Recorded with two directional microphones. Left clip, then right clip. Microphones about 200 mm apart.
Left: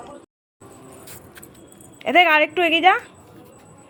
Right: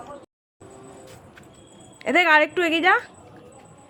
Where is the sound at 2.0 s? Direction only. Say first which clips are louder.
Left 2 dB; 5° right (ahead or behind).